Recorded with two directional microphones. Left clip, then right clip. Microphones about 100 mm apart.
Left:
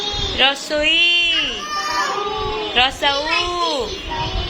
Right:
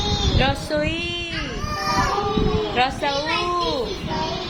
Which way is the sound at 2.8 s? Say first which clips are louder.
Left 6 dB; 5° right (ahead or behind).